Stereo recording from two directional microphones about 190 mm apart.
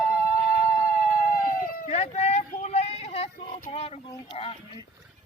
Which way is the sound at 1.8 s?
35° left (ahead or behind).